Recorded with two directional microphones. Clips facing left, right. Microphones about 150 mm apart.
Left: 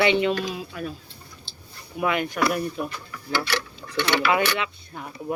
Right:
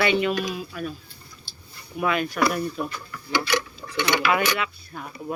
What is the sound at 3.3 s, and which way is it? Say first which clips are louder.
Speech: right 2 dB; 15° right (ahead or behind).